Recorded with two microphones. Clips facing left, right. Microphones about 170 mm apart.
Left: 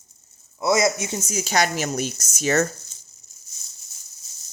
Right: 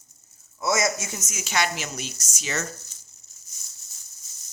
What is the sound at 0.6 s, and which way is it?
Speech, 20° left (ahead or behind).